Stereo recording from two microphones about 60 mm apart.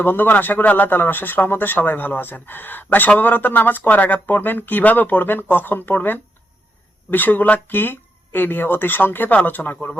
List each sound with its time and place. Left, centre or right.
0.0 s a man's voice: left